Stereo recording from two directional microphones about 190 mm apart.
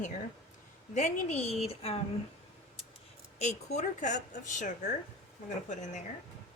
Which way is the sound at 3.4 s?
35° left (ahead or behind).